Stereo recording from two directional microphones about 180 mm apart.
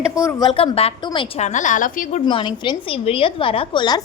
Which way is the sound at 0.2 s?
20° left (ahead or behind).